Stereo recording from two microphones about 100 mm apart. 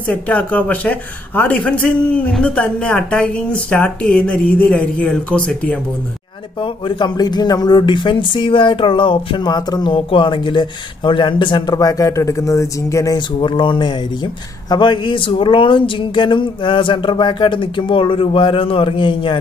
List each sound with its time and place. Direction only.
0.0 s a woman's voice: 15° left (ahead or behind)
6.6 s speech: 50° left (ahead or behind)
9.9 s speech: 55° left (ahead or behind); by 13.2 s 35° left (ahead or behind)
13.4 s speech: 55° left (ahead or behind)